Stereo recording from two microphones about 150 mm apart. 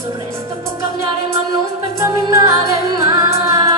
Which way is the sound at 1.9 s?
20° right (ahead or behind).